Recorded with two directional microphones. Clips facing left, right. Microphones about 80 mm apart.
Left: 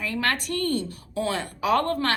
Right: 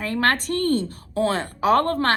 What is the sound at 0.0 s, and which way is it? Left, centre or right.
A woman's voice, right.